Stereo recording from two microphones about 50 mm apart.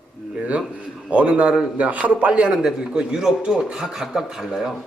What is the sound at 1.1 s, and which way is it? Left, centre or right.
A man's voice, right.